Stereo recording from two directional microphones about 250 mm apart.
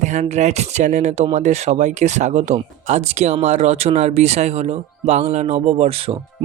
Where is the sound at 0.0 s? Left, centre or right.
Right.